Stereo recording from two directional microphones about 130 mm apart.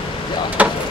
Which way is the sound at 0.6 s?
10° right (ahead or behind).